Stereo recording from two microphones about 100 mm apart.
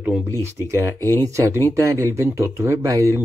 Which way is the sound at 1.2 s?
30° right (ahead or behind).